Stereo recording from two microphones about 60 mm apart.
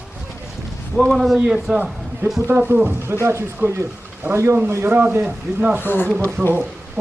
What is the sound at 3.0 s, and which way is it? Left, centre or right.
Speech, right.